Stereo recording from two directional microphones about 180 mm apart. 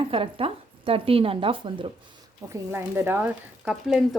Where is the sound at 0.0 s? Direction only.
30° right (ahead or behind).